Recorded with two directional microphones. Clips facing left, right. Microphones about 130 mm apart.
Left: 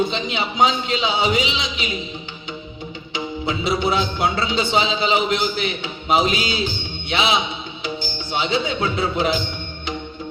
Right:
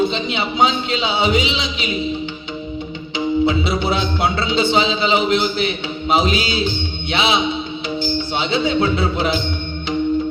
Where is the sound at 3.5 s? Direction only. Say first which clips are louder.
Right 2 dB; 45° left (ahead or behind).